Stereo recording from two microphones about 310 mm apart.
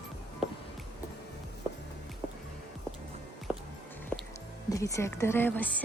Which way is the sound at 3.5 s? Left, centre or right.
Centre.